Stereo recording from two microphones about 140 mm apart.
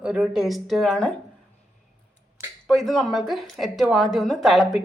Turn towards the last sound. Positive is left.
turn(degrees=0)  # may be behind; listen again after turning